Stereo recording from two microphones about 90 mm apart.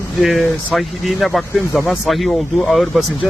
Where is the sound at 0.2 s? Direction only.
Centre (ahead or behind).